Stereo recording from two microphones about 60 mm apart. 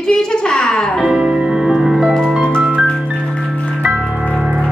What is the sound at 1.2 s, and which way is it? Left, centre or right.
Music, centre.